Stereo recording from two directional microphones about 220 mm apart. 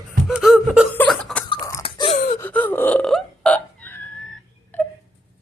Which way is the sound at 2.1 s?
25° left (ahead or behind).